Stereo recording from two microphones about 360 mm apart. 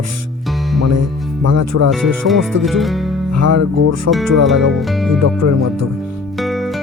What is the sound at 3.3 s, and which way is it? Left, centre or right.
Speech, right.